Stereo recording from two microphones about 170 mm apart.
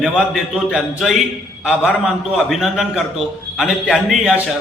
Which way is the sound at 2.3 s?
Centre (ahead or behind).